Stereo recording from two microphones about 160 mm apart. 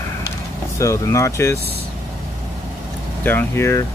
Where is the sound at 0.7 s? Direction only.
20° left (ahead or behind).